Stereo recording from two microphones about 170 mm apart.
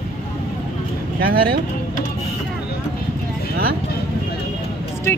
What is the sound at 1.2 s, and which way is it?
Speech, 60° right (ahead or behind).